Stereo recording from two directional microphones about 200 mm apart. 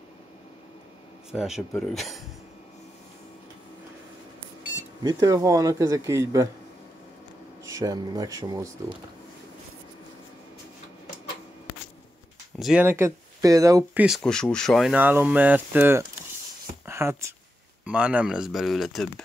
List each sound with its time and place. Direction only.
1.3 s speech: centre (ahead or behind)
5.0 s speech: 15° right (ahead or behind)
7.6 s speech: 15° right (ahead or behind)
12.5 s speech: centre (ahead or behind)
12.8 s speech: 15° right (ahead or behind)
14.0 s speech: centre (ahead or behind)
16.8 s a sound: 10° right (ahead or behind)
17.8 s speech: 5° right (ahead or behind)